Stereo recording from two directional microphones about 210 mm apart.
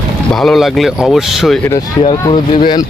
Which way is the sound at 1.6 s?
20° left (ahead or behind).